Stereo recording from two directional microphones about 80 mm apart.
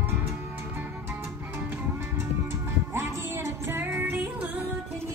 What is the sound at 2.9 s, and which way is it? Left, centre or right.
Music, right.